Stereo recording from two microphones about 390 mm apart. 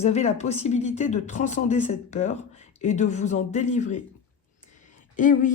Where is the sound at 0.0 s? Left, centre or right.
Centre.